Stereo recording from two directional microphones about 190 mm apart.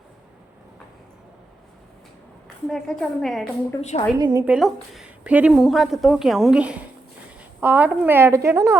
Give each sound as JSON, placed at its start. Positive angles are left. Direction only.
{"t": 2.6, "sound": "a woman's voice", "side_deg": 5}
{"t": 3.8, "sound": "a woman's voice", "side_deg": 35}
{"t": 4.2, "sound": "a woman's voice", "side_deg": -20}
{"t": 4.4, "sound": "a woman's voice", "side_deg": -5}